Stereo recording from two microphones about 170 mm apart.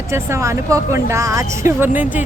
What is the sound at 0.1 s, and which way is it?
A woman's voice, 15° right (ahead or behind).